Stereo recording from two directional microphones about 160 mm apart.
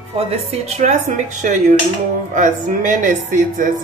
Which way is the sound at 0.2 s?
40° right (ahead or behind).